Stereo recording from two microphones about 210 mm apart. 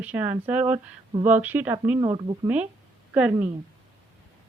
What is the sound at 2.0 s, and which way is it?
Speech, 20° right (ahead or behind).